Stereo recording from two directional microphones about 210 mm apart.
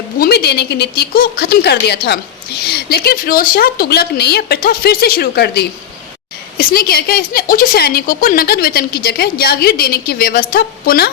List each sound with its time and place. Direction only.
0.2 s a woman's voice: 50° left (ahead or behind)